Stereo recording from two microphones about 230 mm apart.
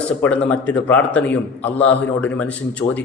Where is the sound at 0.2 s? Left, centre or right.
Centre.